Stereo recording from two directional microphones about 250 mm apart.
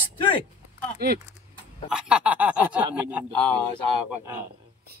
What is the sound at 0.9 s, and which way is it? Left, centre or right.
Speech, right.